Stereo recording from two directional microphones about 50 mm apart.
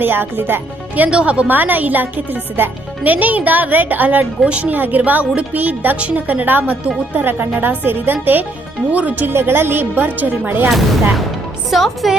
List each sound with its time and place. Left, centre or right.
0.0 s speech: right
1.1 s a woman's voice: right
1.5 s a woman's voice: right
5.2 s a woman's voice: right
5.5 s speech: right
9.3 s speech: right
11.7 s speech: centre